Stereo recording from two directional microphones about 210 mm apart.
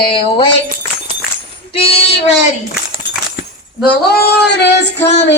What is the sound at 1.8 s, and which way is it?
Child singing, 25° left (ahead or behind).